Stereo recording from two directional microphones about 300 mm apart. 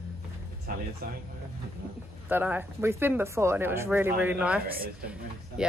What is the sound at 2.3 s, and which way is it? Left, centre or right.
Speech, centre.